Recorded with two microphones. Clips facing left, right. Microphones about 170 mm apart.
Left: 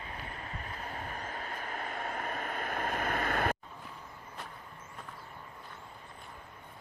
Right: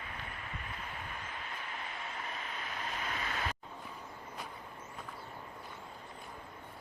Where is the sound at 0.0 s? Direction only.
35° left (ahead or behind); by 3.6 s 55° left (ahead or behind).